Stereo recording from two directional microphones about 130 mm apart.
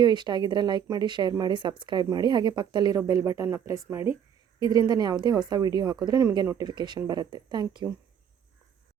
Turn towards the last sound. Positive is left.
turn(degrees=-35)  # may be behind; listen again after turning